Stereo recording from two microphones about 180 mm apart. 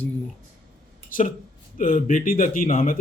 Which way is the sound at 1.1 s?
50° left (ahead or behind).